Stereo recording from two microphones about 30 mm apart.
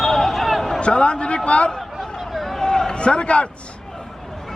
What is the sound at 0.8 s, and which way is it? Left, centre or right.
Speech, left.